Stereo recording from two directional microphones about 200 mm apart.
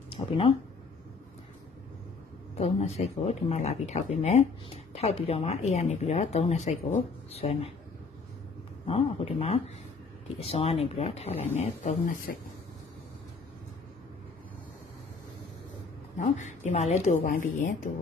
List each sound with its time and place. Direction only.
0.1 s speech: 30° left (ahead or behind)
2.5 s speech: 35° left (ahead or behind)
8.8 s a man's voice: 30° left (ahead or behind)
16.2 s speech: 35° left (ahead or behind)